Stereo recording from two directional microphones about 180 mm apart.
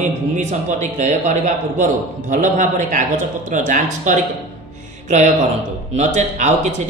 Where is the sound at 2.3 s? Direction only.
45° right (ahead or behind).